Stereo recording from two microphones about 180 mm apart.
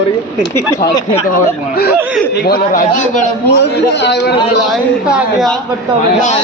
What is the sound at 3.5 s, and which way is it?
Speech, 70° left (ahead or behind).